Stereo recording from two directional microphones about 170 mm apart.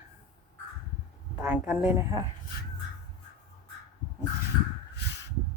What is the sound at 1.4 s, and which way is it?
Speech, 10° right (ahead or behind).